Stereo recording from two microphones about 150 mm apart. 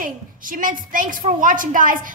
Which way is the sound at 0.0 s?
65° right (ahead or behind).